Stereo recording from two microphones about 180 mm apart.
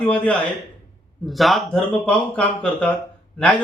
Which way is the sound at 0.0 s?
5° left (ahead or behind).